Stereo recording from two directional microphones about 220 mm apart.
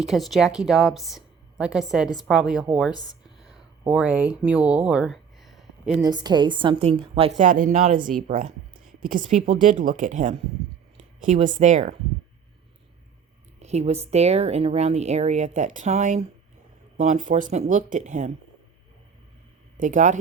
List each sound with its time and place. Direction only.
0.0 s a woman's voice: centre (ahead or behind)
2.9 s speech: 20° left (ahead or behind)
3.4 s a sound: 5° right (ahead or behind)
6.0 s a woman's voice: 20° right (ahead or behind)
13.6 s speech: 30° right (ahead or behind)
19.7 s speech: 35° right (ahead or behind)